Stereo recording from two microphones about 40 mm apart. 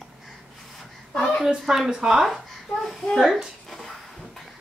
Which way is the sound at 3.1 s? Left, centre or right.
Centre.